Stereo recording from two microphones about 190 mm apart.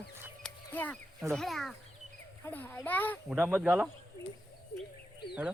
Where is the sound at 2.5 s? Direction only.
10° left (ahead or behind).